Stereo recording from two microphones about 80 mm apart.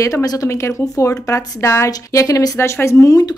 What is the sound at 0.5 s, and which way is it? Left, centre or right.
Speech, left.